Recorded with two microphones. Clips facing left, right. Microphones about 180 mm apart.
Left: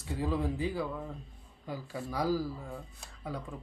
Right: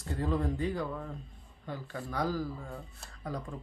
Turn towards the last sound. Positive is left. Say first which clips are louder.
# right 1 dB
turn(degrees=0)  # may be behind; listen again after turning